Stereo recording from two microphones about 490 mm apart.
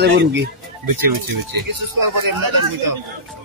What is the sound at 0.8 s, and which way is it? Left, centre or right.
A man's voice, right.